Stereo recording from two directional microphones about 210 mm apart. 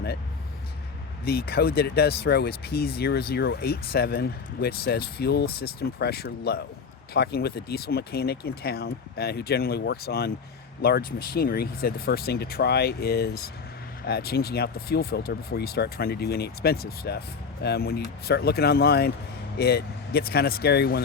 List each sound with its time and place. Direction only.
1.2 s speech: 50° left (ahead or behind)